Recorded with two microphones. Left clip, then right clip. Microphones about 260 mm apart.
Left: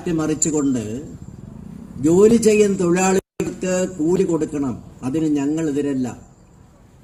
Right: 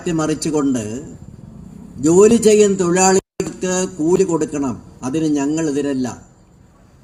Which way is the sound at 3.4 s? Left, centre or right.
Right.